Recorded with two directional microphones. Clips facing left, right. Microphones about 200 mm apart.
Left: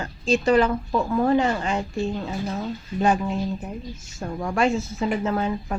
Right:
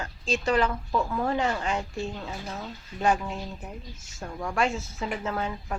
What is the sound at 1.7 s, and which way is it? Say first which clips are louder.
Speech: left 6 dB; 30° left (ahead or behind).